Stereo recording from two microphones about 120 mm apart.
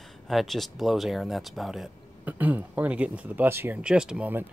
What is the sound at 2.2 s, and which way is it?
Speech, 15° right (ahead or behind).